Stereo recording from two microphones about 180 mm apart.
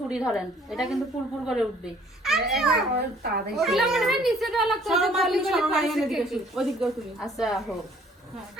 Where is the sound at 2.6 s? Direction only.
Centre (ahead or behind).